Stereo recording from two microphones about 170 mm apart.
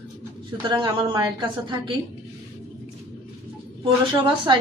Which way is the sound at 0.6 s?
25° right (ahead or behind).